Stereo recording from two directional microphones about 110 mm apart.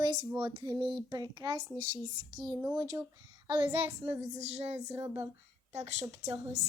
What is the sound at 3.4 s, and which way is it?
Child singing, 45° right (ahead or behind).